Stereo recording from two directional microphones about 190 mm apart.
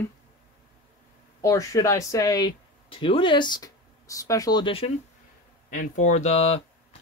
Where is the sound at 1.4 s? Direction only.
15° left (ahead or behind).